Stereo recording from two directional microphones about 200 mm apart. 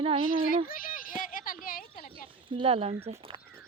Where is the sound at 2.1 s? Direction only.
25° right (ahead or behind).